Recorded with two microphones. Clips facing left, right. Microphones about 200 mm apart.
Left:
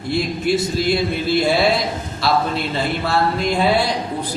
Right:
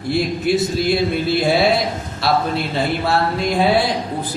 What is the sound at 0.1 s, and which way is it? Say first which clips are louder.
A man's voice: right 1 dB; centre (ahead or behind).